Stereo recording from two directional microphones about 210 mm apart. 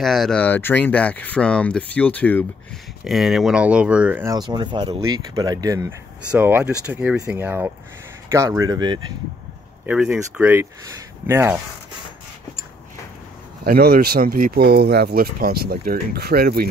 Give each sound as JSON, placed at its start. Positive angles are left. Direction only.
{"t": 0.0, "sound": "speech", "side_deg": 0}
{"t": 9.8, "sound": "speech", "side_deg": -5}
{"t": 13.7, "sound": "speech", "side_deg": -45}